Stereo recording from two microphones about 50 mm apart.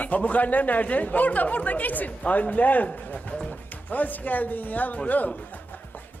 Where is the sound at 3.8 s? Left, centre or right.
Left.